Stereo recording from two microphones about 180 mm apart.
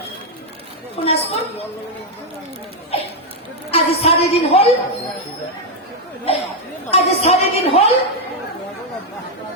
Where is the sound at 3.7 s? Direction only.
35° left (ahead or behind).